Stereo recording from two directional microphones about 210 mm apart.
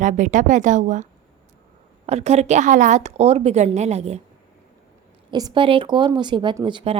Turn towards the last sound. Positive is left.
turn(degrees=-25)  # may be behind; listen again after turning